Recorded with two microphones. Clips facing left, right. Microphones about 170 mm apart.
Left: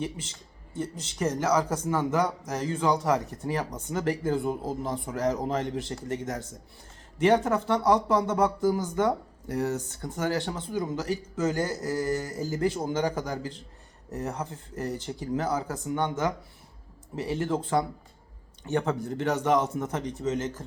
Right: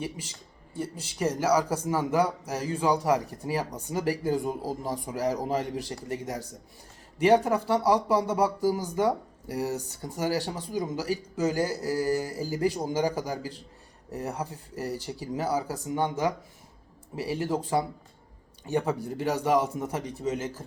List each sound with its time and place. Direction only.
0.0 s speech: 10° right (ahead or behind)
11.6 s a sound: 35° right (ahead or behind)
11.9 s speech: 15° right (ahead or behind)
15.6 s a sound: 35° right (ahead or behind)
16.0 s speech: 15° right (ahead or behind)
18.7 s speech: 15° right (ahead or behind)